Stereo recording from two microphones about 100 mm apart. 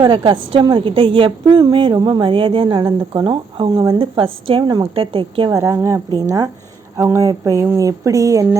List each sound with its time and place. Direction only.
0.0 s a woman's voice: 50° right (ahead or behind)
4.6 s a woman's voice: 45° right (ahead or behind)
4.9 s a woman's voice: 65° right (ahead or behind)
5.5 s speech: 30° right (ahead or behind)